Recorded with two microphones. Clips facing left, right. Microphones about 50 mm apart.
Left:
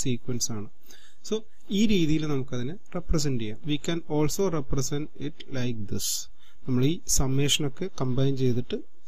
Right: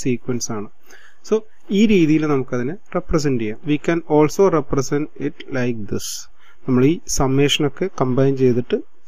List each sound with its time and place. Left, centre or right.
0.0 s speech: right